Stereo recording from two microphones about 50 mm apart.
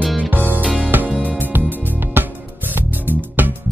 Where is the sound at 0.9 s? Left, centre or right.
Right.